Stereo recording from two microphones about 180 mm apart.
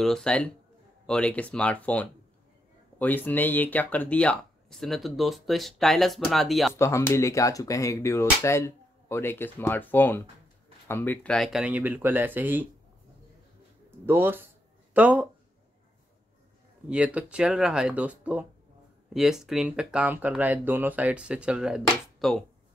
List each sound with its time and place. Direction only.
0.0 s speech: 5° left (ahead or behind)
3.3 s speech: 10° left (ahead or behind)
6.7 s speech: 15° left (ahead or behind); by 12.6 s 10° right (ahead or behind)
13.8 s speech: 10° right (ahead or behind)
16.9 s speech: 5° right (ahead or behind)